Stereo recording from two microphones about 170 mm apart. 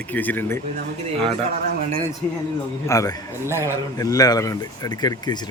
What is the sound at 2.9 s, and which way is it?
Speech, 20° left (ahead or behind).